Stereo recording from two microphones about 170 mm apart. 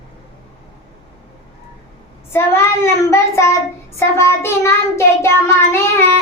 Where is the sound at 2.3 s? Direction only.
15° left (ahead or behind).